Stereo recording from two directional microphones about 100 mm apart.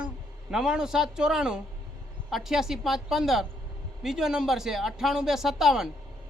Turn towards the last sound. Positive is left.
turn(degrees=-5)  # may be behind; listen again after turning